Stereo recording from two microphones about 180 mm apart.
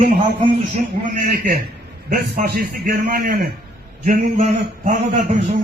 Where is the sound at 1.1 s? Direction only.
50° right (ahead or behind).